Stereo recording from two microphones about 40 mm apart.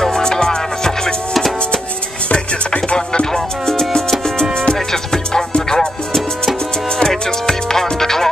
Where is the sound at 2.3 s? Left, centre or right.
Left.